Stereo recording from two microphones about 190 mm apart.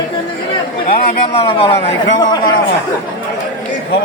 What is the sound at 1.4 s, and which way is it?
A man's voice, 30° left (ahead or behind).